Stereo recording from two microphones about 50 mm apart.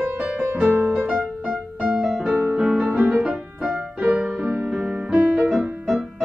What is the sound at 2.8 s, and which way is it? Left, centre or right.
Music, right.